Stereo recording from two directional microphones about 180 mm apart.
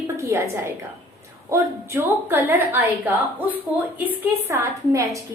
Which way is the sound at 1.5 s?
10° right (ahead or behind).